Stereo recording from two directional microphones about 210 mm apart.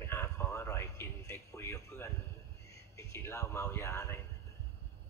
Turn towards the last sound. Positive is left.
turn(degrees=15)  # may be behind; listen again after turning